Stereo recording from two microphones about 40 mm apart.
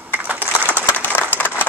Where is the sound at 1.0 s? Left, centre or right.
Left.